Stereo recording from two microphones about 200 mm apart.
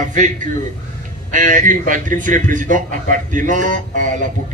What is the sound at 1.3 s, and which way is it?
A man's voice, 40° right (ahead or behind).